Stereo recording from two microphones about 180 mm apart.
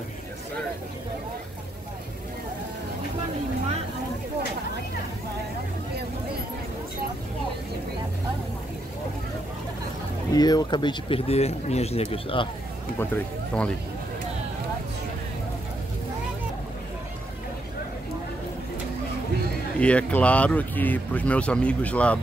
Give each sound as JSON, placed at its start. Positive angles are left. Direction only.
{"t": 10.3, "sound": "speech", "side_deg": 20}
{"t": 13.0, "sound": "speech", "side_deg": 10}
{"t": 19.8, "sound": "speech", "side_deg": 5}